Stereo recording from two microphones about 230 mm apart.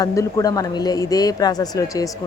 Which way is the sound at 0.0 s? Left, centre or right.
Centre.